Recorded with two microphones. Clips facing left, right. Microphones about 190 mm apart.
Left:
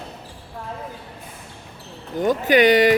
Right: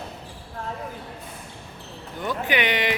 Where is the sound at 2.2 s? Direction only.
40° left (ahead or behind).